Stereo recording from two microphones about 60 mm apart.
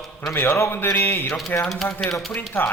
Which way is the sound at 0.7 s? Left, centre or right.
Left.